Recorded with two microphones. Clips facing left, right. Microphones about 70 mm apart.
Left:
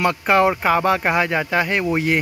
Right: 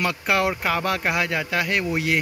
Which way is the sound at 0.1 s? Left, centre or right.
Left.